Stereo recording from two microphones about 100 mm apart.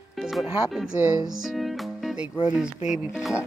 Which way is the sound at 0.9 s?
20° right (ahead or behind).